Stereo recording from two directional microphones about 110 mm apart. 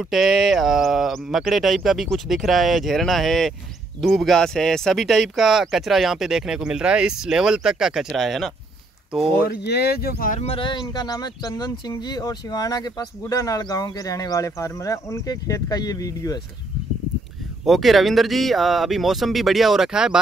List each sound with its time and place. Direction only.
0.0 s speech: centre (ahead or behind)
10.4 s speech: 50° left (ahead or behind); by 16.3 s 35° left (ahead or behind)
17.6 s speech: centre (ahead or behind)